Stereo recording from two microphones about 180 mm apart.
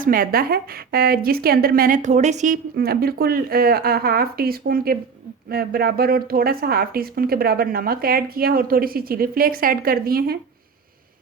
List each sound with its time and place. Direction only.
0.0 s a woman's voice: 50° right (ahead or behind)